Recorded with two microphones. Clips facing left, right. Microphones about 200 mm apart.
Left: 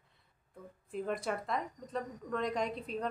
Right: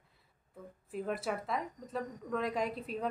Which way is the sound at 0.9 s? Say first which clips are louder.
Even; 5° right (ahead or behind).